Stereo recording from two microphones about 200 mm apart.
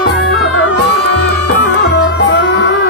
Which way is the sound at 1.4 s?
55° left (ahead or behind).